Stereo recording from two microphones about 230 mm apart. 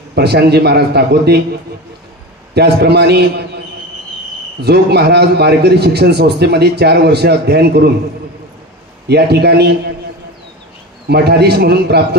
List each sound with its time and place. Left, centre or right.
0.1 s a man's voice: right
2.5 s a man's voice: right
9.0 s a man's voice: right
11.1 s a man's voice: right